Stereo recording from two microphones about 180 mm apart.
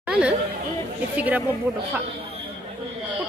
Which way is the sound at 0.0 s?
5° right (ahead or behind).